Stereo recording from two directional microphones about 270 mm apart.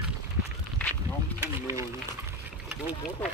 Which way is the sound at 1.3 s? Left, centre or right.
Centre.